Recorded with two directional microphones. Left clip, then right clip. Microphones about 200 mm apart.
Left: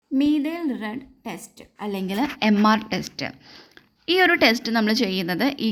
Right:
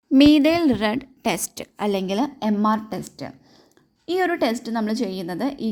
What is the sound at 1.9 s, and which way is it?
Speech, 30° right (ahead or behind).